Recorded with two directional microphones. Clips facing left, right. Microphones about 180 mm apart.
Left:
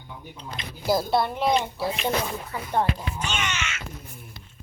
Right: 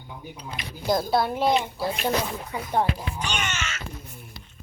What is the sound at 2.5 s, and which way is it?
Speech, 15° right (ahead or behind).